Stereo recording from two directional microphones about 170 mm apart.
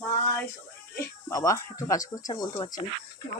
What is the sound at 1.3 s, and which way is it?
Speech, 20° left (ahead or behind).